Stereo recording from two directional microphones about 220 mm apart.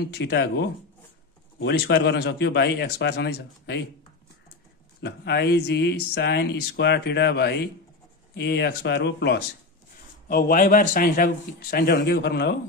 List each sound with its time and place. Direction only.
0.0 s speech: 50° left (ahead or behind)
5.0 s speech: 50° left (ahead or behind)